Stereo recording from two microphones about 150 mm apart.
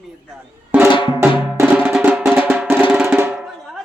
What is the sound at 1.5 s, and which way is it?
Music, 10° right (ahead or behind).